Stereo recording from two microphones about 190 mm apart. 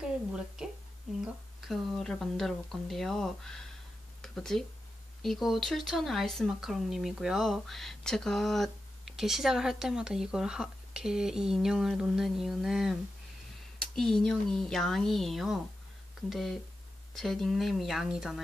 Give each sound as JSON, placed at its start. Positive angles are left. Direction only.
{"t": 1.2, "sound": "speech", "side_deg": 0}